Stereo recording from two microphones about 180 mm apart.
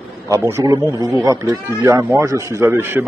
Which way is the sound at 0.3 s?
15° right (ahead or behind).